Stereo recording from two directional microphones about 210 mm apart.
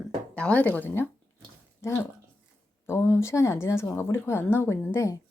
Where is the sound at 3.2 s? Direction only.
15° left (ahead or behind).